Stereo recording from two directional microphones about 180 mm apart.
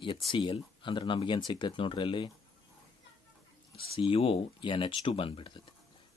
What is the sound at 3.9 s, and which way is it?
Speech, 30° left (ahead or behind).